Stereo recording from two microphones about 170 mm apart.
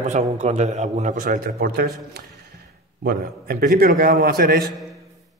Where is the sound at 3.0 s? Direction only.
65° right (ahead or behind).